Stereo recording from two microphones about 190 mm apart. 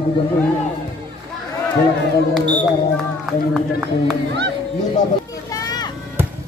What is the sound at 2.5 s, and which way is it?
Speech, centre (ahead or behind).